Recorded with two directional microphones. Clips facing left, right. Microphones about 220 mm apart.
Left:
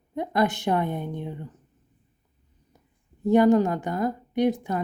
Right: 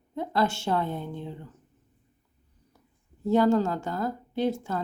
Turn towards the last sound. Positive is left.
turn(degrees=15)  # may be behind; listen again after turning